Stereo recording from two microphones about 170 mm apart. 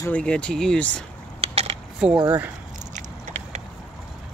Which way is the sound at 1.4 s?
35° right (ahead or behind).